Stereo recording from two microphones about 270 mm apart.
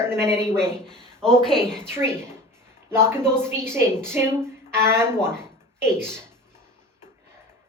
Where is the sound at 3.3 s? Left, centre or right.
Centre.